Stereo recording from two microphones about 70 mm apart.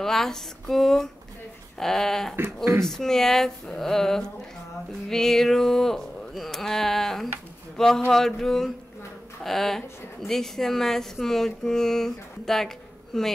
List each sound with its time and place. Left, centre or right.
0.0 s a woman's voice: centre
2.3 s speech: right
2.8 s a woman's voice: centre